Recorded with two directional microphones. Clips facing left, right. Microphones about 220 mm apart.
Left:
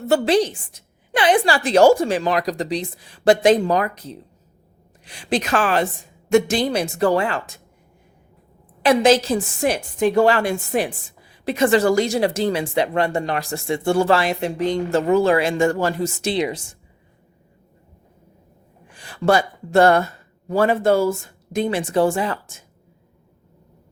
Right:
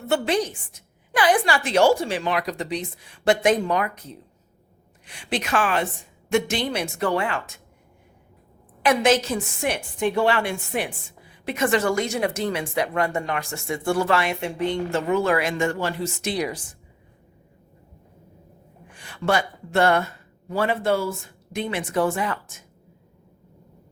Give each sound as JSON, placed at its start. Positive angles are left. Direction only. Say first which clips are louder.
{"t": 0.1, "sound": "a woman's voice", "louder": "left 5 dB", "side_deg": 35}
{"t": 5.0, "sound": "a woman's voice", "louder": "left 5 dB", "side_deg": 35}
{"t": 8.8, "sound": "a woman's voice", "louder": "left 4 dB", "side_deg": 30}
{"t": 16.3, "sound": "a woman's voice", "louder": "left 4 dB", "side_deg": 25}
{"t": 18.9, "sound": "a woman's voice", "louder": "left 5 dB", "side_deg": 35}